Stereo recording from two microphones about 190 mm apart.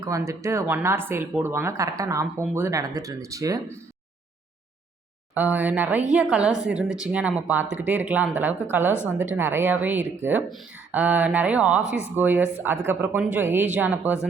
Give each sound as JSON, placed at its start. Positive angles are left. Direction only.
{"t": 0.0, "sound": "speech", "side_deg": -15}
{"t": 5.3, "sound": "speech", "side_deg": -10}